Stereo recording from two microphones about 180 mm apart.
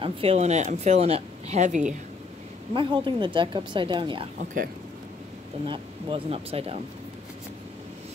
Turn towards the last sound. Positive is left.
turn(degrees=-35)  # may be behind; listen again after turning